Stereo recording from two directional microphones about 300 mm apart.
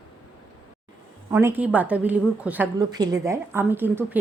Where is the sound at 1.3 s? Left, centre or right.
Centre.